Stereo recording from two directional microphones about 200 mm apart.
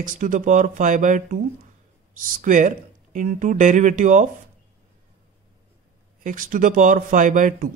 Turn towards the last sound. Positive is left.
turn(degrees=-40)  # may be behind; listen again after turning